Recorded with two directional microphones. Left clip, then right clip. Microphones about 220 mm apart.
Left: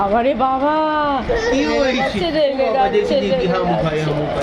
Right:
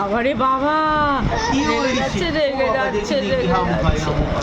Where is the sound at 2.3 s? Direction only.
Centre (ahead or behind).